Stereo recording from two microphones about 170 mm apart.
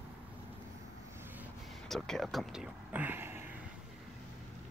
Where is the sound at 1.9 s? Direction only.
5° left (ahead or behind); by 3.4 s 15° right (ahead or behind).